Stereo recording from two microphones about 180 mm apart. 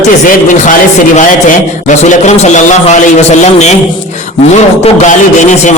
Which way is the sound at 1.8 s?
45° left (ahead or behind).